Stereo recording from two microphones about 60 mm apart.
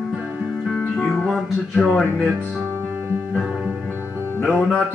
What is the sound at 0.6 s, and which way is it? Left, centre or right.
Music, centre.